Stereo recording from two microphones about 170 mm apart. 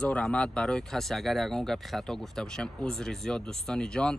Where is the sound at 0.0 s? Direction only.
5° left (ahead or behind).